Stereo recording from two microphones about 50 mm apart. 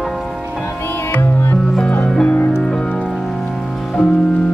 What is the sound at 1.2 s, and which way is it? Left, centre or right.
Music, left.